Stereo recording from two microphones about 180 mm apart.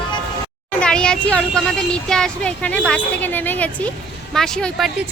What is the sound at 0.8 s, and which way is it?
A woman's voice, 5° left (ahead or behind).